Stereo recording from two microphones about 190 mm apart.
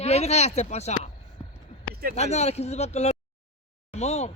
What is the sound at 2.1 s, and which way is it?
Speech, 35° left (ahead or behind).